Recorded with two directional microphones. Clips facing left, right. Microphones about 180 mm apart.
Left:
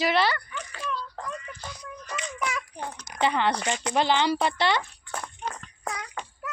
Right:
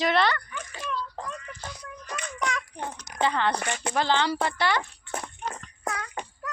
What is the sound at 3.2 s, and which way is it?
A woman's voice, 15° left (ahead or behind).